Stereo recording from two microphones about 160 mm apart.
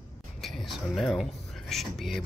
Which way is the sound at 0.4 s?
Centre (ahead or behind).